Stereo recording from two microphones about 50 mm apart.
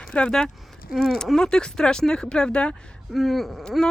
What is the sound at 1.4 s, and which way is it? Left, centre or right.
Speech, centre.